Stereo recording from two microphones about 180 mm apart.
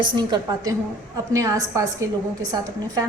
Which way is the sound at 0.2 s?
20° right (ahead or behind).